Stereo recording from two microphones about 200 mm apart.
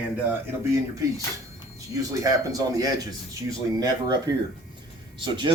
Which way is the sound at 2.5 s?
20° right (ahead or behind).